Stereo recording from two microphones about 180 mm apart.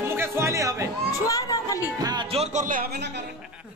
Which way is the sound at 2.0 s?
25° right (ahead or behind).